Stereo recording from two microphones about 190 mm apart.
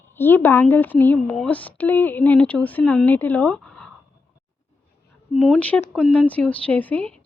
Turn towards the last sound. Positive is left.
turn(degrees=10)  # may be behind; listen again after turning